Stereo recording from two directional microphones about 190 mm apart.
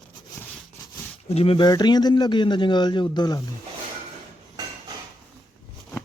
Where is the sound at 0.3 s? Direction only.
Centre (ahead or behind).